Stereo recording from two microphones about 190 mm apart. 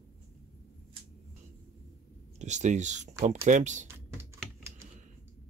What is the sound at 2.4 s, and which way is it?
Speech, 40° right (ahead or behind).